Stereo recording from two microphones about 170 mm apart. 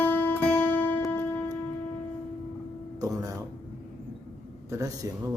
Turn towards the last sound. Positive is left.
turn(degrees=-20)  # may be behind; listen again after turning